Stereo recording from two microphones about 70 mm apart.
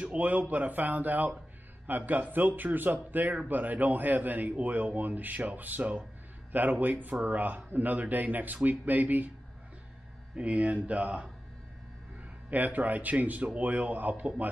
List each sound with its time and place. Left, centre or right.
0.0 s a man's voice: centre
10.3 s a man's voice: centre
12.4 s a man's voice: right